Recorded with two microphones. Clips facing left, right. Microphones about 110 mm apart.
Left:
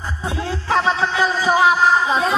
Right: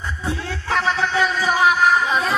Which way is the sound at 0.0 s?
30° left (ahead or behind).